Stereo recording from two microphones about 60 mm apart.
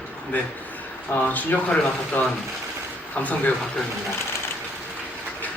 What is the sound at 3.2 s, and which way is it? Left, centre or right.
Speech, left.